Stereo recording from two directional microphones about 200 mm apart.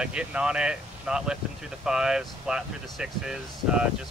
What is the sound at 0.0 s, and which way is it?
Speech, 5° right (ahead or behind).